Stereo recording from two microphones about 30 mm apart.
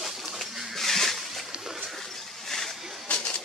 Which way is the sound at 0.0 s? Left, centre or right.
Centre.